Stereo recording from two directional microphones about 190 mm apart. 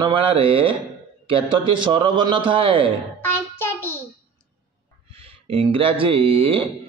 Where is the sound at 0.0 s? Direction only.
30° right (ahead or behind).